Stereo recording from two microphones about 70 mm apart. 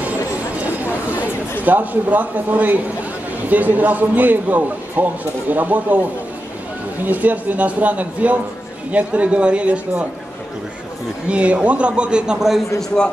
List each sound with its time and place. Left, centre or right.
1.6 s a man's voice: right
11.2 s a man's voice: centre